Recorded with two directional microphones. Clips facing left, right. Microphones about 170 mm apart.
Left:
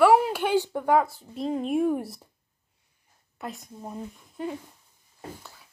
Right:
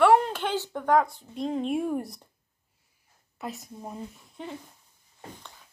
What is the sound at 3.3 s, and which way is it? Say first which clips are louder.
A woman's voice: even; centre (ahead or behind).